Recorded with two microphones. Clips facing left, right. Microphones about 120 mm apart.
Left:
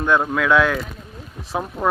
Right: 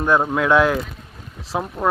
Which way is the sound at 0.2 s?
20° right (ahead or behind).